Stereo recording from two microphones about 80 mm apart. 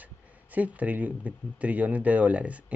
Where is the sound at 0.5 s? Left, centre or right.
Centre.